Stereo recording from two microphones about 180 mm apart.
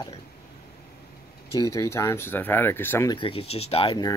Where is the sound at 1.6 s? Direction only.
15° left (ahead or behind).